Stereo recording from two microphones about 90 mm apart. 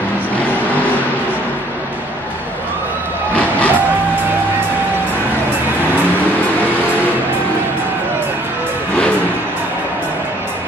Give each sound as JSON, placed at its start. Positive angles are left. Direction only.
{"t": 3.3, "sound": "music", "side_deg": 15}